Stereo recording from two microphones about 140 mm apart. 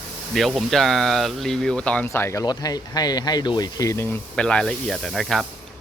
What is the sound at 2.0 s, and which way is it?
Speech, 20° left (ahead or behind).